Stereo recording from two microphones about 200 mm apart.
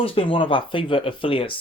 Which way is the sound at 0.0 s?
30° left (ahead or behind).